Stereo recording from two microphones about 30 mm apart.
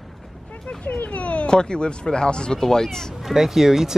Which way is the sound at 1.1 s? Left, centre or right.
Left.